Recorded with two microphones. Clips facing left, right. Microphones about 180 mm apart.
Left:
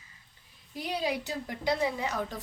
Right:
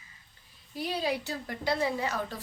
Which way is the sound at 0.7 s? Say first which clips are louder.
Right 1 dB; 15° left (ahead or behind).